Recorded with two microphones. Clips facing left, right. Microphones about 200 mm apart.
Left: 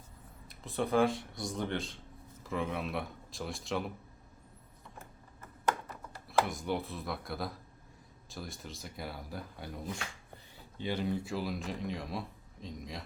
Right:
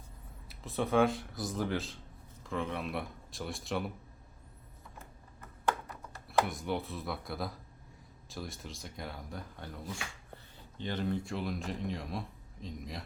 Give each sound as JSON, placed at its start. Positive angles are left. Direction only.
{"t": 0.4, "sound": "speech", "side_deg": 0}
{"t": 6.2, "sound": "speech", "side_deg": 0}
{"t": 10.8, "sound": "speech", "side_deg": 10}